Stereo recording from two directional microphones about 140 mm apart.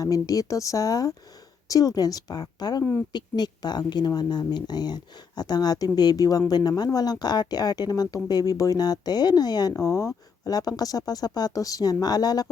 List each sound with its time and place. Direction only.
0.0 s speech: 25° left (ahead or behind)